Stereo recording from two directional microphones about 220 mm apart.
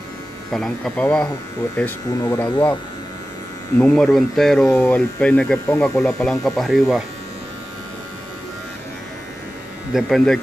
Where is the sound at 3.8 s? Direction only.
5° left (ahead or behind).